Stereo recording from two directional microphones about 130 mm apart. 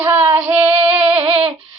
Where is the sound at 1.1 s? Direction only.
45° right (ahead or behind).